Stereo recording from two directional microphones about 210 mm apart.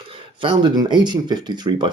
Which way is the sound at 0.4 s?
20° right (ahead or behind).